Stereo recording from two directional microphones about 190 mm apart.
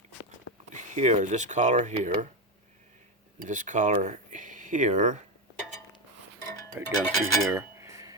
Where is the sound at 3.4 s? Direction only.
40° right (ahead or behind).